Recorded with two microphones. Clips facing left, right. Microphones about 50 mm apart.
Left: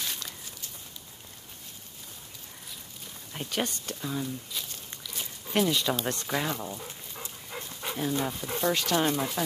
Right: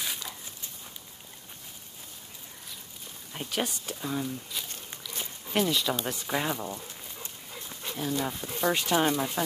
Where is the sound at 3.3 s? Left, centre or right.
Centre.